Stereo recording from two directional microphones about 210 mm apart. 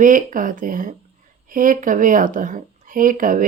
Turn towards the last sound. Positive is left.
turn(degrees=-40)  # may be behind; listen again after turning